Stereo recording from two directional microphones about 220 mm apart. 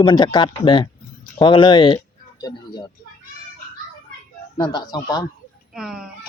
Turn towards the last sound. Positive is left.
turn(degrees=0)  # may be behind; listen again after turning